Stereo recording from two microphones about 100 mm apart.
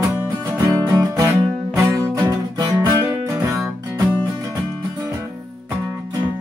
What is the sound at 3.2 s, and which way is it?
Music, 30° right (ahead or behind).